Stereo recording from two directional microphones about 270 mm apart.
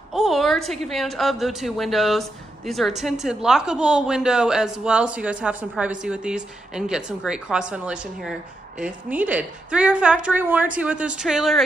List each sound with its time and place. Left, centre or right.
0.1 s a woman's voice: centre